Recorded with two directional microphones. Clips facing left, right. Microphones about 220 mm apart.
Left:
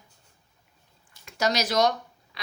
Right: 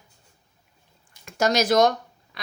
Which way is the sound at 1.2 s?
50° right (ahead or behind).